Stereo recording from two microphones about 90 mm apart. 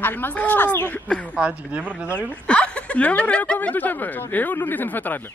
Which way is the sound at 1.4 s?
15° right (ahead or behind).